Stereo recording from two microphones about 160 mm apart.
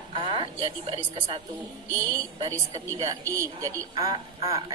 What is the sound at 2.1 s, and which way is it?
A woman's voice, 25° right (ahead or behind).